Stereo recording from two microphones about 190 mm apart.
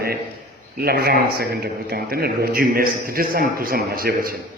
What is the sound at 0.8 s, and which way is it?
A man's voice, 55° right (ahead or behind).